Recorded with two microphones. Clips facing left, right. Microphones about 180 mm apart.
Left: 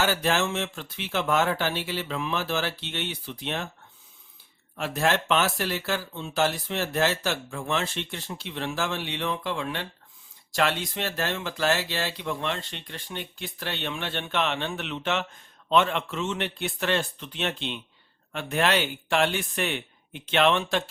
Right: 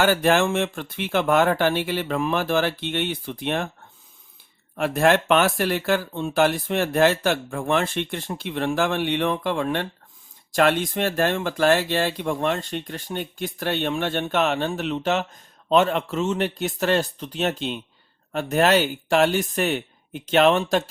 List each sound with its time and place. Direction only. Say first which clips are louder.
0.0 s speech: right 6 dB; 55° right (ahead or behind)
4.8 s speech: right 7 dB; 55° right (ahead or behind)